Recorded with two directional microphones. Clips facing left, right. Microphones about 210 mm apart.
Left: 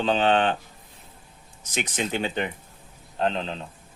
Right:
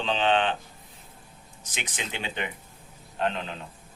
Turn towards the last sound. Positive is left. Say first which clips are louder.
# left 3 dB
turn(degrees=30)  # may be behind; listen again after turning